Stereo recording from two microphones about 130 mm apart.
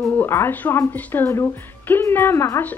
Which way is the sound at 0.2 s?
15° left (ahead or behind).